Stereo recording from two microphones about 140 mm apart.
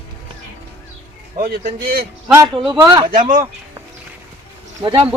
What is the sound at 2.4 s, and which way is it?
Speech, 35° right (ahead or behind).